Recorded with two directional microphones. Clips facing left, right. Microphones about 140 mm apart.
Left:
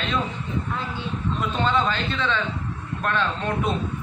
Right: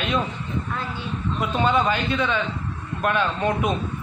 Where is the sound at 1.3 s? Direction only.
10° right (ahead or behind).